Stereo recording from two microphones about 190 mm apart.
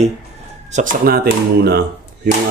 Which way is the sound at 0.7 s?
45° right (ahead or behind).